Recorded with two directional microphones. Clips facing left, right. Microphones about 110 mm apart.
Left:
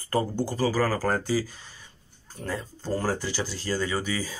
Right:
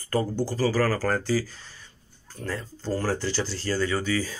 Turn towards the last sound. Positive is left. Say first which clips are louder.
# right 3 dB
turn(degrees=15)  # may be behind; listen again after turning